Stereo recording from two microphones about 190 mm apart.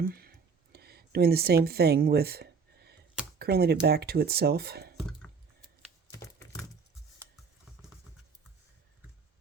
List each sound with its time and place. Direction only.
0.0 s a sound: 50° right (ahead or behind)
3.3 s speech: 55° right (ahead or behind)
6.1 s typing: 15° left (ahead or behind)